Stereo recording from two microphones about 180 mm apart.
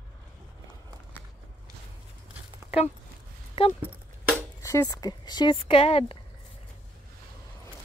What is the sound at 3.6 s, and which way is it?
Speech, 30° left (ahead or behind).